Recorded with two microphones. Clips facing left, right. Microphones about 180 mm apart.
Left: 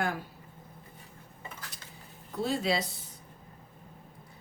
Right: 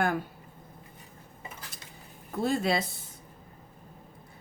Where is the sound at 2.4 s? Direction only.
50° right (ahead or behind).